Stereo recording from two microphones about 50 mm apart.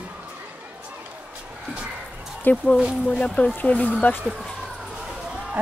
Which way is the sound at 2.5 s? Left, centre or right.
Left.